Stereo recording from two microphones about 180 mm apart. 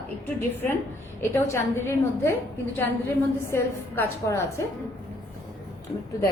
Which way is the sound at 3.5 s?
15° left (ahead or behind).